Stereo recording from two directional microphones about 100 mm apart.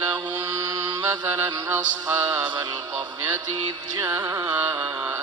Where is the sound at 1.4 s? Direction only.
45° right (ahead or behind).